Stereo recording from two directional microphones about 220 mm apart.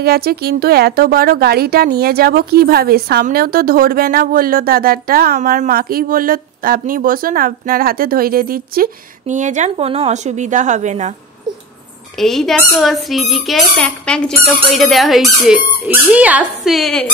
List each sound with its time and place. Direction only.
0.0 s a woman's voice: 45° right (ahead or behind)
12.2 s speech: centre (ahead or behind)